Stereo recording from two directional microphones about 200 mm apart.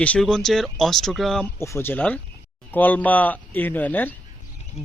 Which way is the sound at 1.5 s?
15° left (ahead or behind).